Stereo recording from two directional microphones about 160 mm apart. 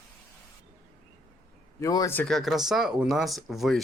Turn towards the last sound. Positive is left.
turn(degrees=0)  # may be behind; listen again after turning